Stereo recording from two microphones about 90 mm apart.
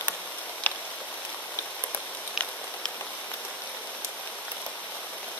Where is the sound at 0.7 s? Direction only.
20° left (ahead or behind).